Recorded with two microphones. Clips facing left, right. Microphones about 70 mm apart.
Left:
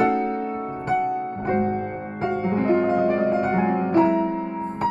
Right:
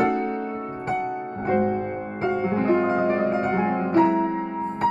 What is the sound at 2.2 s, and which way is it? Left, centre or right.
Music, right.